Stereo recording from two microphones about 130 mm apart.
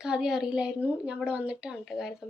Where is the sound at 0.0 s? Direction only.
5° right (ahead or behind).